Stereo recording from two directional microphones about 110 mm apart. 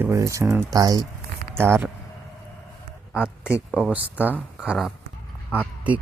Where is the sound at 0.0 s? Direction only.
30° right (ahead or behind).